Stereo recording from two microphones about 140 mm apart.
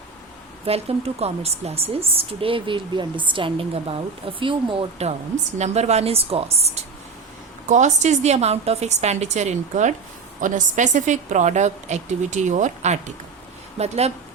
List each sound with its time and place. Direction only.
0.6 s a woman's voice: 45° right (ahead or behind)